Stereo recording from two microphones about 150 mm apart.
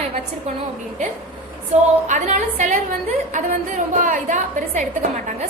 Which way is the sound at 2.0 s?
55° right (ahead or behind).